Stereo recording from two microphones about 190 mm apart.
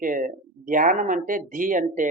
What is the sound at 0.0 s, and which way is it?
Speech, 45° right (ahead or behind).